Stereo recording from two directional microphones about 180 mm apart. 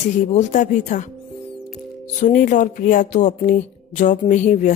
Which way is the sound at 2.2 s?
45° left (ahead or behind).